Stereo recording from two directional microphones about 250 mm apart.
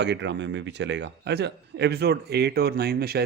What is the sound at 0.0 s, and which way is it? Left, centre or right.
A man's voice, right.